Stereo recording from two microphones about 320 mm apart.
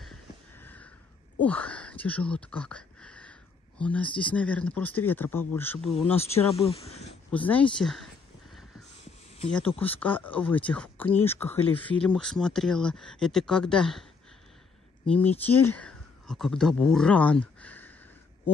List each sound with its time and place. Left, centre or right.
0.0 s a sound: centre
1.4 s speech: centre
6.5 s speech: centre
7.2 s speech: centre
9.8 s speech: centre
15.0 s speech: centre